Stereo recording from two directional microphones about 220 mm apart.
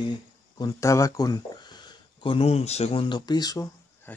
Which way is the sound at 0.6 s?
15° left (ahead or behind).